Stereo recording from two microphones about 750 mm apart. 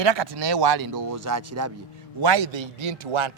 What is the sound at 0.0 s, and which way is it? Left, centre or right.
Speech, right.